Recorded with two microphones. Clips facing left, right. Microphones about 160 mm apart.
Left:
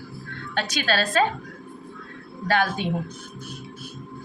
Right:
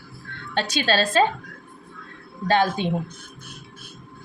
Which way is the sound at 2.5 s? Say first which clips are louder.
Right 3 dB; 20° right (ahead or behind).